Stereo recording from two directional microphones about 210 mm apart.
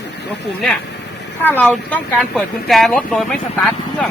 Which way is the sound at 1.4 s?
10° left (ahead or behind).